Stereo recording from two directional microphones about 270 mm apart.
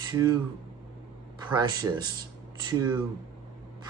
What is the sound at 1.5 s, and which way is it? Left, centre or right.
Speech, centre.